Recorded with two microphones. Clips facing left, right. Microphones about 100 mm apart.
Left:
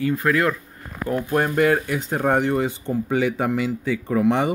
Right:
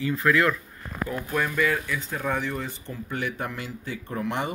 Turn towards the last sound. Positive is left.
turn(degrees=85)